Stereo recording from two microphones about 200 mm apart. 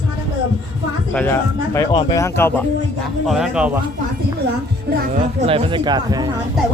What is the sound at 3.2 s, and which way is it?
Speech, centre (ahead or behind).